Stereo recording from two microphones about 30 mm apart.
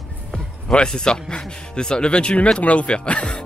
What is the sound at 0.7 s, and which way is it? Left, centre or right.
A man's voice, left.